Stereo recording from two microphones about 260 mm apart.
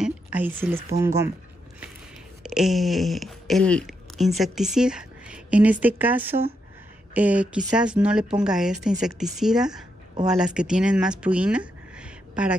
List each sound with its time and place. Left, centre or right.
0.0 s a sound: centre
1.0 s speech: centre
2.4 s a woman's voice: centre